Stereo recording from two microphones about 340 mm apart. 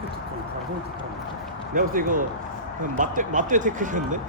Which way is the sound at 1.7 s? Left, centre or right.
Right.